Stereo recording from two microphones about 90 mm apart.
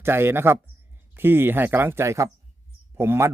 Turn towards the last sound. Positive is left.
turn(degrees=-25)  # may be behind; listen again after turning